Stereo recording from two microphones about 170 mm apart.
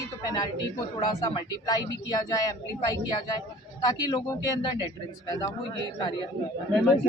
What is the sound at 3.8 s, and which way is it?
A man's voice, 20° left (ahead or behind).